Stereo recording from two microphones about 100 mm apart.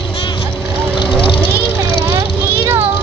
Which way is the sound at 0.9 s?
50° left (ahead or behind).